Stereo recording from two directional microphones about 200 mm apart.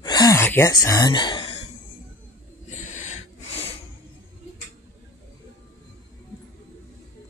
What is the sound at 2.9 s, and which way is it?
Snort, 35° left (ahead or behind).